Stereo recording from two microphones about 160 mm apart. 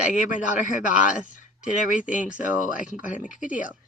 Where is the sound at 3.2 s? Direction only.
55° left (ahead or behind).